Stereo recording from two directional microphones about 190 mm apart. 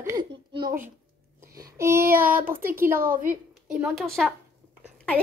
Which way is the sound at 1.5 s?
15° right (ahead or behind).